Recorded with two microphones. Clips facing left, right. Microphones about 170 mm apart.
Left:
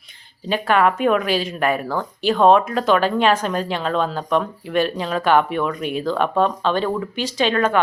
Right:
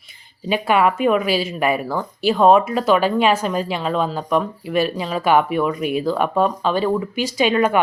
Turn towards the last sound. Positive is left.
turn(degrees=-10)  # may be behind; listen again after turning